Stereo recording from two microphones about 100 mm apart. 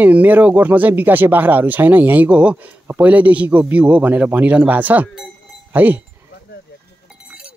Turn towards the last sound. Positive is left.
turn(degrees=-20)  # may be behind; listen again after turning